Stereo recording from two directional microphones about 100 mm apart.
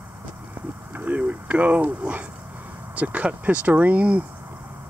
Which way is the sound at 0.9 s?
15° right (ahead or behind).